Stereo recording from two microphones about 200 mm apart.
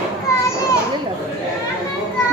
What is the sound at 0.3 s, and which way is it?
Children playing, 15° left (ahead or behind).